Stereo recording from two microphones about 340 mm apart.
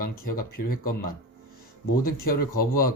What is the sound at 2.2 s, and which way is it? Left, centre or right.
Speech, left.